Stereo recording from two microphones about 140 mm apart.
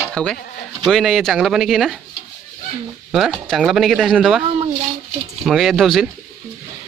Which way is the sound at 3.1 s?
Centre (ahead or behind).